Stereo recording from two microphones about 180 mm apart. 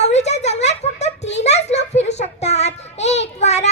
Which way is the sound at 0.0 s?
35° left (ahead or behind).